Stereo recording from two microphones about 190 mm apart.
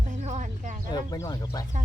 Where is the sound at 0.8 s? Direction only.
20° left (ahead or behind).